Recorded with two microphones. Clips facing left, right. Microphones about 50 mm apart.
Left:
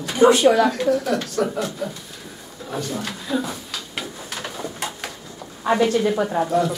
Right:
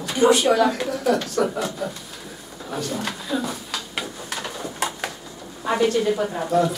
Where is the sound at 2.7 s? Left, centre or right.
Centre.